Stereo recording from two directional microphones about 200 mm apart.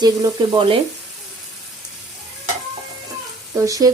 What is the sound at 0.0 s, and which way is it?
Speech, 20° right (ahead or behind).